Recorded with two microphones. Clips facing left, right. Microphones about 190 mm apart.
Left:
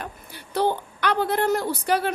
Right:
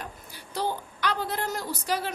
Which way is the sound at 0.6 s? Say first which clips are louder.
Left 7 dB; 60° left (ahead or behind).